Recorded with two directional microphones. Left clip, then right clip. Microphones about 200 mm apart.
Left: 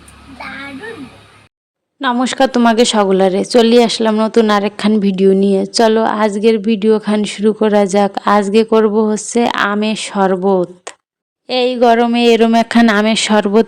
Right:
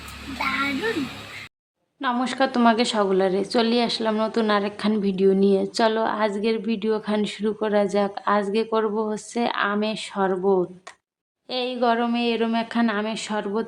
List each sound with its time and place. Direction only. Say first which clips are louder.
2.0 s a woman's voice: left 9 dB; 35° left (ahead or behind)